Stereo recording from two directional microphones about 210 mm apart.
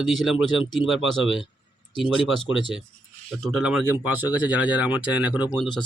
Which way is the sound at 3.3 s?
Centre (ahead or behind).